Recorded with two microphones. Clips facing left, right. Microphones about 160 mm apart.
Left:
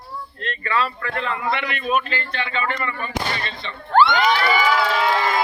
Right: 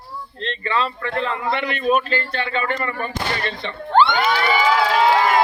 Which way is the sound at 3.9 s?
20° right (ahead or behind).